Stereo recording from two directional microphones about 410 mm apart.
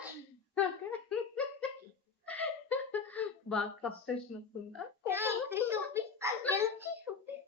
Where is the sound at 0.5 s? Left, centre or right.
Centre.